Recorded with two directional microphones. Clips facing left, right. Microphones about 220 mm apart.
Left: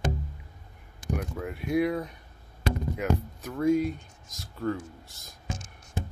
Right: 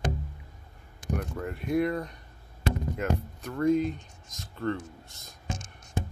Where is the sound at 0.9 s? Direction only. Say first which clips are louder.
Even; 5° left (ahead or behind).